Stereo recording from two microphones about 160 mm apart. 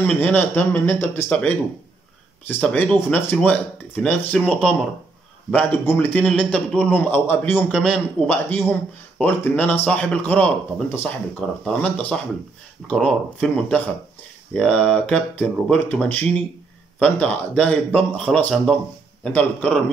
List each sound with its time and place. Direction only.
0.0 s a man's voice: 10° left (ahead or behind)